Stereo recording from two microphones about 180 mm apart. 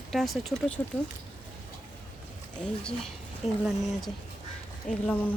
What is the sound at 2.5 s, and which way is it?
Speech, 5° left (ahead or behind).